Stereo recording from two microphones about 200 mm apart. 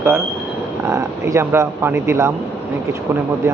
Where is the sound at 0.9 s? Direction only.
15° right (ahead or behind).